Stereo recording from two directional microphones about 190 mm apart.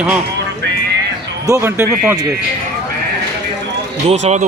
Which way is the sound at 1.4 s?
15° right (ahead or behind).